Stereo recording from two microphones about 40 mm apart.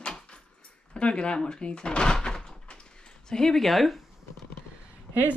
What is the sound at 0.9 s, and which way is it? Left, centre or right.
Speech, left.